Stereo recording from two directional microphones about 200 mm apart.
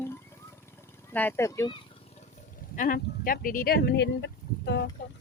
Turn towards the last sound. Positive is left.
turn(degrees=55)  # may be behind; listen again after turning